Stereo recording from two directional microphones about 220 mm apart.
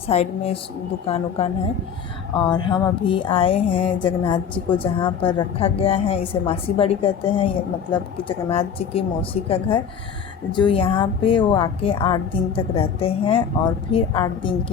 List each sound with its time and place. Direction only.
0.1 s a woman's voice: 30° left (ahead or behind)